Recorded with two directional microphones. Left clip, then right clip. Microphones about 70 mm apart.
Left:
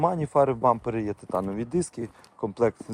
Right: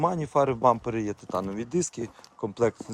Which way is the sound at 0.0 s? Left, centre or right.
Right.